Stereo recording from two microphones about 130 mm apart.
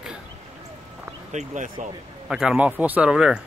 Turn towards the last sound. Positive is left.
turn(degrees=-5)  # may be behind; listen again after turning